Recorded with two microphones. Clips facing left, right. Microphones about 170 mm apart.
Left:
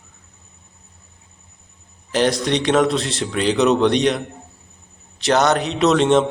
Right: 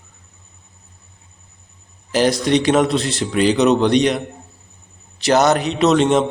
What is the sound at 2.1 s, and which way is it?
Speech, centre (ahead or behind).